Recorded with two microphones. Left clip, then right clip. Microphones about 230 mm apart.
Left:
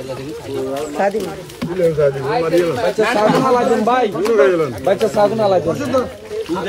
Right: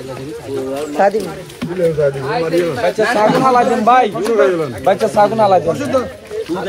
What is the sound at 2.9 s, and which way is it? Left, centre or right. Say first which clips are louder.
Speech: right 2 dB; centre.